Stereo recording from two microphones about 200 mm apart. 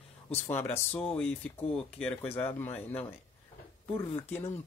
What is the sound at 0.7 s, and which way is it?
Speech, 5° left (ahead or behind).